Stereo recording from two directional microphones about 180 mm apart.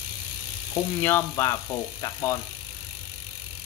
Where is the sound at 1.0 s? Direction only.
15° left (ahead or behind).